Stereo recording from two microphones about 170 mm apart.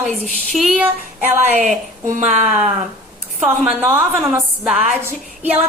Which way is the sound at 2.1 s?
45° right (ahead or behind).